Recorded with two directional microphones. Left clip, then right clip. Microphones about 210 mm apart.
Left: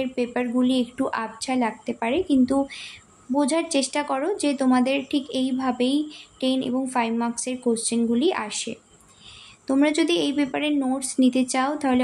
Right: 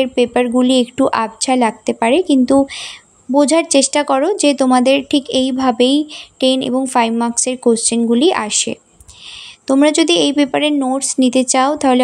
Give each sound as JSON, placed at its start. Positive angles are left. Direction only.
{"t": 0.0, "sound": "speech", "side_deg": -35}